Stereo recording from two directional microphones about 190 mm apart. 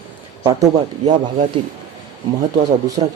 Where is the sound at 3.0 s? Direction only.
30° right (ahead or behind).